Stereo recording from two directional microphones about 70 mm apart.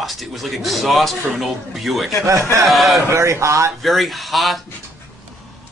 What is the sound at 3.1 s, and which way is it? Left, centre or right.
Speech, right.